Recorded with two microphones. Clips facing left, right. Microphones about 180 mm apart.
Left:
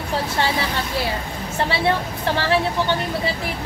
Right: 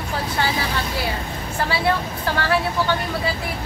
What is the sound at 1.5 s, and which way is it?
Speech, 25° left (ahead or behind).